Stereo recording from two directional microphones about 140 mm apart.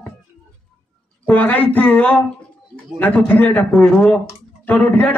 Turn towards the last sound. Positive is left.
turn(degrees=10)  # may be behind; listen again after turning